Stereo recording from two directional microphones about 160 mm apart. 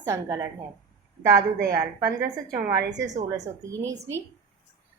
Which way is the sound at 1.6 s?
65° right (ahead or behind).